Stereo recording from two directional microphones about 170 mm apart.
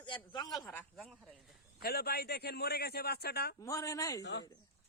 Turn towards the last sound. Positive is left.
turn(degrees=20)  # may be behind; listen again after turning